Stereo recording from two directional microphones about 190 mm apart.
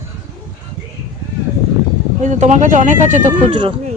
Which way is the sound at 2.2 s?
40° right (ahead or behind).